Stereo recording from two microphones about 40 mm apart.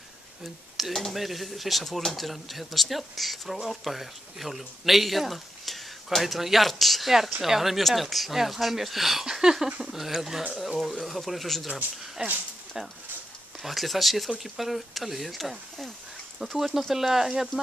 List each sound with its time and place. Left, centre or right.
0.7 s speech: centre
13.6 s speech: centre